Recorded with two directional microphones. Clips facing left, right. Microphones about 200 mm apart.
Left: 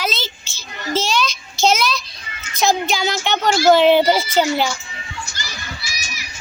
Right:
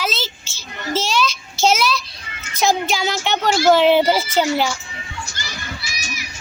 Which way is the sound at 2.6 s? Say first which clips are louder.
Even; 5° right (ahead or behind).